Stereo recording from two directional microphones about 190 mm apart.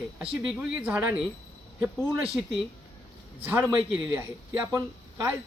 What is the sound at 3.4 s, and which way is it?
Speech, 10° right (ahead or behind).